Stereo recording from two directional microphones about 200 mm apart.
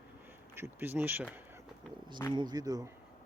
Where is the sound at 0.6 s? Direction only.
10° right (ahead or behind).